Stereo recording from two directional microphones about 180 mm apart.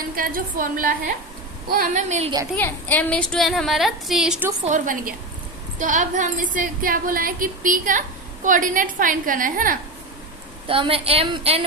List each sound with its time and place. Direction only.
0.2 s speech: 50° right (ahead or behind)
2.6 s a woman's voice: 5° left (ahead or behind)
4.6 s speech: 45° right (ahead or behind)
10.7 s a woman's voice: 30° right (ahead or behind)